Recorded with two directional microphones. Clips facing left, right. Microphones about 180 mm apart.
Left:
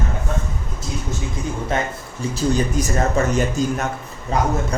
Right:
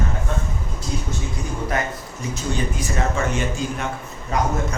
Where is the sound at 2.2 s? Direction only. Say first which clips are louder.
Left 6 dB; 35° left (ahead or behind).